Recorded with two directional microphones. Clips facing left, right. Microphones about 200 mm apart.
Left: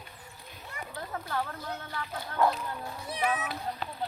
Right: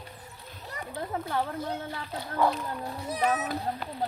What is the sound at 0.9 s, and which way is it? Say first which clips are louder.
Speech: right 4 dB; 25° right (ahead or behind).